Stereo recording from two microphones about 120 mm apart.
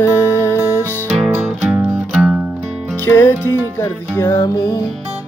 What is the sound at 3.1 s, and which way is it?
Music, 20° left (ahead or behind).